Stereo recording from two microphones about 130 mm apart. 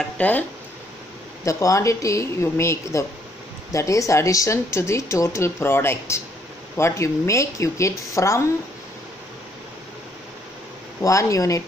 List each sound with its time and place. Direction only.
0.2 s speech: 10° left (ahead or behind)
1.4 s speech: 25° left (ahead or behind)
11.0 s speech: 25° left (ahead or behind)